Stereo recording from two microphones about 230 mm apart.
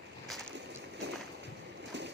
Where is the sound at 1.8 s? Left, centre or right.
Right.